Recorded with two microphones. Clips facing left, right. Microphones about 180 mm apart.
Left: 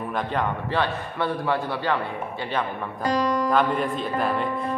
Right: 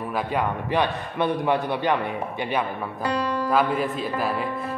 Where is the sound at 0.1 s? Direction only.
10° right (ahead or behind).